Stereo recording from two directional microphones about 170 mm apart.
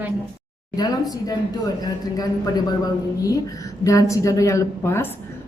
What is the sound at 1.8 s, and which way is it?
A man's voice, 25° left (ahead or behind).